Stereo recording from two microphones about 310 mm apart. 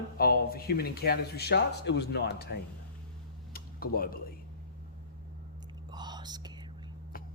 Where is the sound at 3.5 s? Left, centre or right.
Left.